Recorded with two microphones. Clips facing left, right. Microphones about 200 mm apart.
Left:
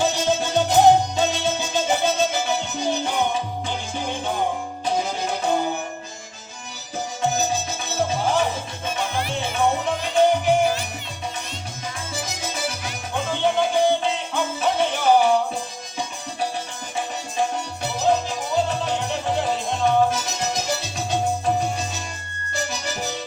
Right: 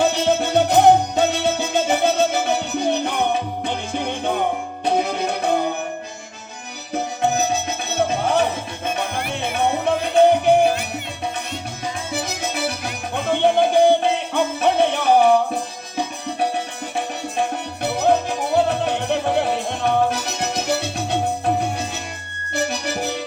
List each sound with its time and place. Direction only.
0.0 s music: 60° right (ahead or behind)
6.9 s music: 60° right (ahead or behind)
12.1 s music: 60° right (ahead or behind)